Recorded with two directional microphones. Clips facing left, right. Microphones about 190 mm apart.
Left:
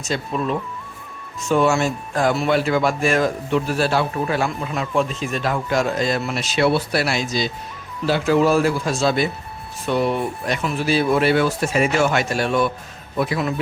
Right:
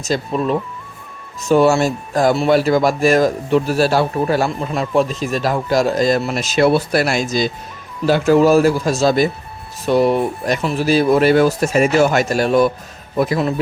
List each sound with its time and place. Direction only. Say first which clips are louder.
0.0 s speech: right 4 dB; 35° right (ahead or behind)